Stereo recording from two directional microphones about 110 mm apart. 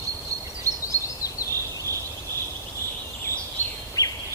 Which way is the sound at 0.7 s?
30° right (ahead or behind).